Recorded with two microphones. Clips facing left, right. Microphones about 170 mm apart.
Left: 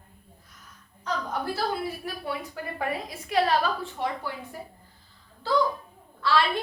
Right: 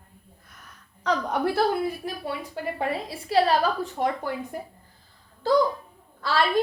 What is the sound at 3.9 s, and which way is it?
Speech, 45° right (ahead or behind).